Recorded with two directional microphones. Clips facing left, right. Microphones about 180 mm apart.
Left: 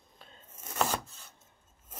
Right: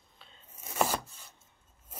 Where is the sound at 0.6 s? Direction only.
5° right (ahead or behind).